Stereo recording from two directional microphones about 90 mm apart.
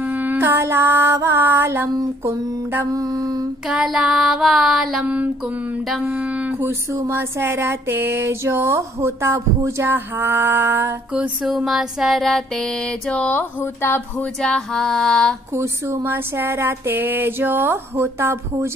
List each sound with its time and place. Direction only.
0.1 s mantra: 20° right (ahead or behind)
2.2 s a sound: 25° right (ahead or behind)
2.9 s music: 40° right (ahead or behind)
3.6 s child singing: 5° right (ahead or behind)
5.0 s mantra: 15° right (ahead or behind)
6.6 s a sound: 25° right (ahead or behind)
11.4 s child singing: 5° right (ahead or behind)
13.1 s speech: 15° left (ahead or behind)
14.4 s female singing: 5° left (ahead or behind)
15.5 s a sound: 30° right (ahead or behind)